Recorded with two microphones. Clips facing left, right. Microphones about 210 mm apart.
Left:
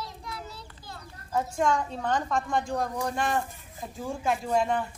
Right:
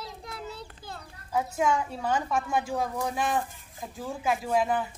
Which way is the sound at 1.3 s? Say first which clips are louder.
Even; 5° right (ahead or behind).